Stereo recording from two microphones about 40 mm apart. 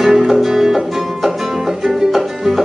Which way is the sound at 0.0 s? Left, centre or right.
Centre.